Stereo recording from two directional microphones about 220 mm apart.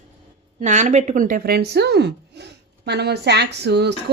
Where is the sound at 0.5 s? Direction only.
35° right (ahead or behind); by 4.1 s 50° right (ahead or behind).